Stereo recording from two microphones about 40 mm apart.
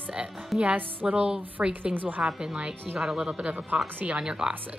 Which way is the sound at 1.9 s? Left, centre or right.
Right.